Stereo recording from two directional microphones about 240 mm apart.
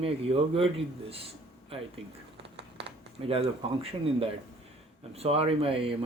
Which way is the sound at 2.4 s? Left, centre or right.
Right.